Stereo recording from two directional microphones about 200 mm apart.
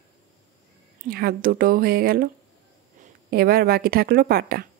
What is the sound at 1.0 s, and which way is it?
Speech, 50° right (ahead or behind).